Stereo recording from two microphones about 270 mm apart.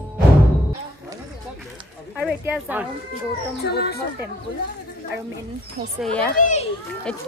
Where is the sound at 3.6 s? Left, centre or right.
Left.